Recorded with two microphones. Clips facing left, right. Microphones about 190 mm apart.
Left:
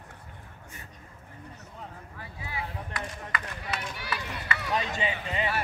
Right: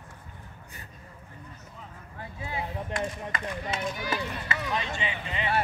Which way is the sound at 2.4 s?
25° right (ahead or behind).